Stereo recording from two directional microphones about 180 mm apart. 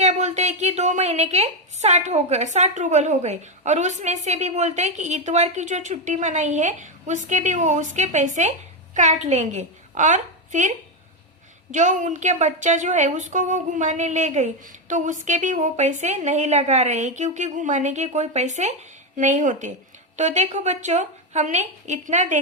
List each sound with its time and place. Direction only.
0.0 s a woman's voice: 40° right (ahead or behind)